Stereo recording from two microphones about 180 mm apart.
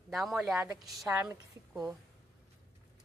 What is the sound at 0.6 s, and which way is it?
Speech, 15° right (ahead or behind).